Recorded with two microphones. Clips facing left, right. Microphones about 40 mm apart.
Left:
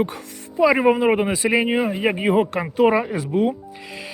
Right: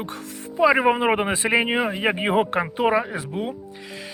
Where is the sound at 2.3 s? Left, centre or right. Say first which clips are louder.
Left 3 dB; right.